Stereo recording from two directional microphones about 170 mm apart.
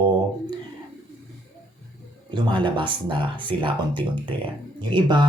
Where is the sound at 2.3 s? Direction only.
25° right (ahead or behind).